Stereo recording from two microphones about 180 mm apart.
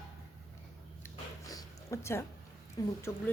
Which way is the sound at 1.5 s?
20° left (ahead or behind).